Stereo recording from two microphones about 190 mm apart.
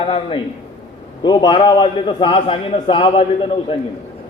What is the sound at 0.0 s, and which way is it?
A man's voice, 30° left (ahead or behind).